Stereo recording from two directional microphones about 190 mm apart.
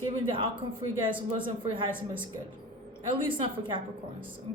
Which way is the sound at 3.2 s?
25° right (ahead or behind).